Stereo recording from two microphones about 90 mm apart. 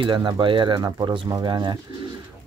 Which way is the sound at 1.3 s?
50° right (ahead or behind).